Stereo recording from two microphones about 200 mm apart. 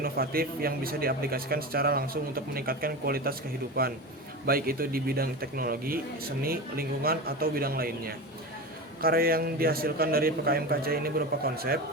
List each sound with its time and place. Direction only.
0.0 s a man's voice: 50° right (ahead or behind)